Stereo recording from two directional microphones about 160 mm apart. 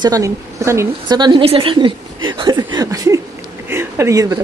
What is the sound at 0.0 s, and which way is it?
A woman's voice, 20° right (ahead or behind).